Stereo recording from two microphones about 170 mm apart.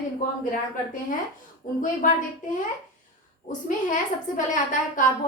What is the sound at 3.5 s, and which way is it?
A woman's voice, 50° left (ahead or behind).